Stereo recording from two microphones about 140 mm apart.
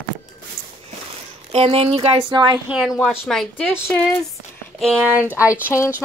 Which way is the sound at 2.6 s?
5° right (ahead or behind).